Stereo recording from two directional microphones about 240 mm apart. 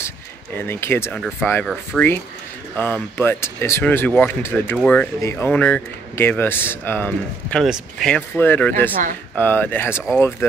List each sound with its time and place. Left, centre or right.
0.6 s speech: centre